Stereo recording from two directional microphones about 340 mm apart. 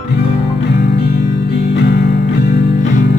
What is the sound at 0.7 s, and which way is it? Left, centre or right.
Music, left.